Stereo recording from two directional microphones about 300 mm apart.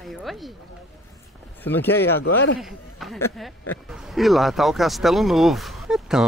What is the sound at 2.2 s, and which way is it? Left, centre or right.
Speech, left.